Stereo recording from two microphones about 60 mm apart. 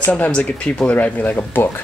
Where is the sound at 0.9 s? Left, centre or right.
Left.